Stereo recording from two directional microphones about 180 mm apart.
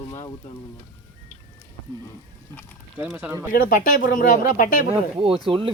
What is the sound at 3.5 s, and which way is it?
Speech, 50° left (ahead or behind).